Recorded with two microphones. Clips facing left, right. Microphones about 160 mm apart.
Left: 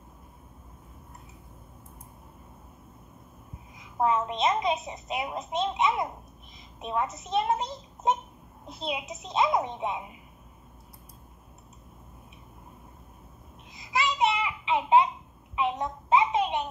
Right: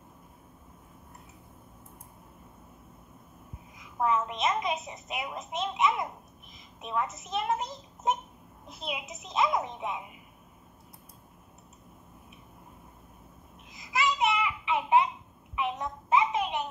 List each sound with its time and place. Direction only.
3.7 s a woman's voice: 25° left (ahead or behind)
13.7 s babbling: 25° left (ahead or behind)
15.5 s a sound: 25° left (ahead or behind)